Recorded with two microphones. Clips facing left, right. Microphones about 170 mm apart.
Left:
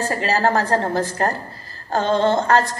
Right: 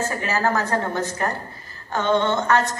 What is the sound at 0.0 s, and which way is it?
A woman's voice, 35° left (ahead or behind).